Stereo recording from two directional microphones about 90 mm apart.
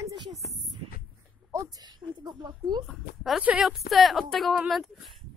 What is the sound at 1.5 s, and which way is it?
Speech, 35° right (ahead or behind).